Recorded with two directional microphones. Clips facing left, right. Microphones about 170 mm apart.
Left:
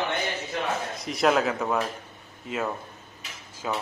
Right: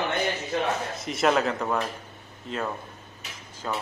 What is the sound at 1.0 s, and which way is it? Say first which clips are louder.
Speech: left 1 dB; centre (ahead or behind).